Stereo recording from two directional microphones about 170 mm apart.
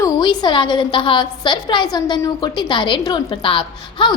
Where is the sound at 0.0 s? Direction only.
25° left (ahead or behind).